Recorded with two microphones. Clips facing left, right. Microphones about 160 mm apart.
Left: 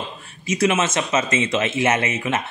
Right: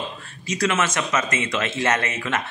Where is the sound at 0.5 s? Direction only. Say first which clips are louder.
Left 3 dB; 20° left (ahead or behind).